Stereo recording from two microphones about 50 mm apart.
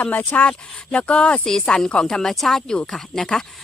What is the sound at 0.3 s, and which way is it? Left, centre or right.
Speech, left.